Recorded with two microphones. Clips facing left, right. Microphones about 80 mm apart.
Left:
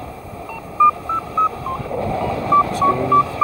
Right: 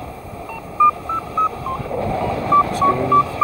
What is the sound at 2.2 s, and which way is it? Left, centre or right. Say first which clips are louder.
Sidetone: even; right.